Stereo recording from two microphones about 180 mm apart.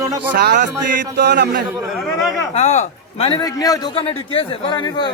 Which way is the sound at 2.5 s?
35° left (ahead or behind).